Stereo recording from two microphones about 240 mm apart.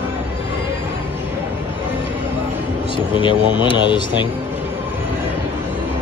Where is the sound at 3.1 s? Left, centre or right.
Left.